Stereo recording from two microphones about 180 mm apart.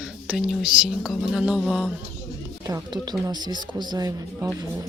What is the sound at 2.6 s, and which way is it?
Speech, 20° right (ahead or behind).